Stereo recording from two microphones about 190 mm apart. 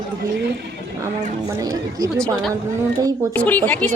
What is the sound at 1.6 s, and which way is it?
Speech, 20° right (ahead or behind).